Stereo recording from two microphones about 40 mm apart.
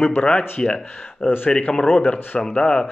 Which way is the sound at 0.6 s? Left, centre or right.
Centre.